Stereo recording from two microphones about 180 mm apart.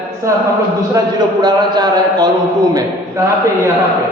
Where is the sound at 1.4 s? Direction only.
25° right (ahead or behind).